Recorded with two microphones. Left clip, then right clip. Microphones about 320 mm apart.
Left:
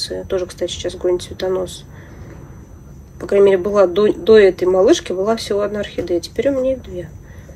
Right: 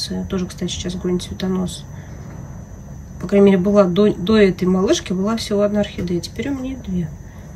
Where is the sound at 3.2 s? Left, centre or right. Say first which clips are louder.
Left 2 dB; centre.